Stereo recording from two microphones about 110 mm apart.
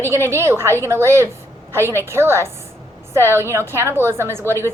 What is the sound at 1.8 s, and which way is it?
Speech, 25° left (ahead or behind).